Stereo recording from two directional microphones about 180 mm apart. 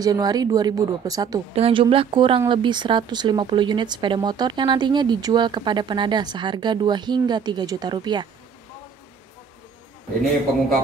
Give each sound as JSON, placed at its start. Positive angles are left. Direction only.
{"t": 0.0, "sound": "speech", "side_deg": -20}
{"t": 1.5, "sound": "speech", "side_deg": -30}